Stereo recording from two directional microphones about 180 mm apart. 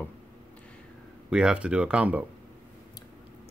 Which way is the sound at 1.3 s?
5° right (ahead or behind).